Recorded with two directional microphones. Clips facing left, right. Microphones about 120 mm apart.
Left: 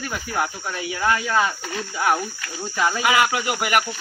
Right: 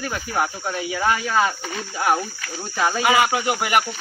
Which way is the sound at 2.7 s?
25° right (ahead or behind).